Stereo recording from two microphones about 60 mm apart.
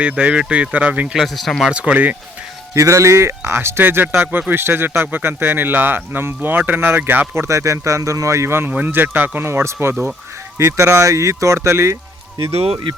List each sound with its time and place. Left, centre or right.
0.0 s speech: centre
1.1 s speech: centre
1.7 s speech: centre
2.7 s speech: right
7.4 s speech: right
8.9 s speech: right
9.5 s speech: right